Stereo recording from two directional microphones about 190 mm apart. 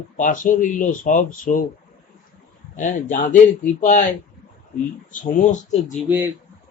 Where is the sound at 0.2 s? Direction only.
45° left (ahead or behind).